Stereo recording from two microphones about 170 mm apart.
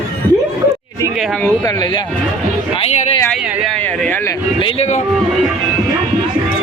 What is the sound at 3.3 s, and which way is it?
Speech, 5° left (ahead or behind).